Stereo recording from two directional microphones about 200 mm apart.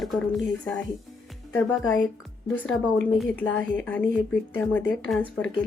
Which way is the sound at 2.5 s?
10° left (ahead or behind).